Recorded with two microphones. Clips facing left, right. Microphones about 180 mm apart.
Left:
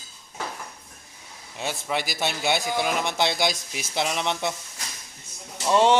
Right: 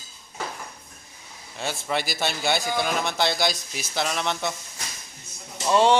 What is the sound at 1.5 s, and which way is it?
Speech, 10° left (ahead or behind).